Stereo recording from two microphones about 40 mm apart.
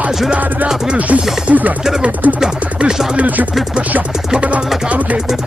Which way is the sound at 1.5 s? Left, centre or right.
Right.